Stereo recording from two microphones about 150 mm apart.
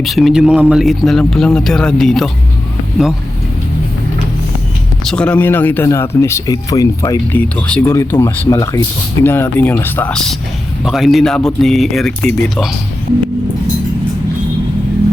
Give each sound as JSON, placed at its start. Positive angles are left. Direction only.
{"t": 0.0, "sound": "speech", "side_deg": 0}
{"t": 5.0, "sound": "speech", "side_deg": 10}
{"t": 7.3, "sound": "speech", "side_deg": 10}